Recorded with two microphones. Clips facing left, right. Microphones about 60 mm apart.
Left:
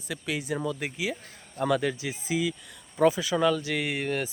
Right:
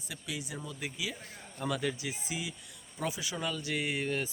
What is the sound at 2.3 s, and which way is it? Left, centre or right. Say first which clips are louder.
Speech: left 12 dB; left.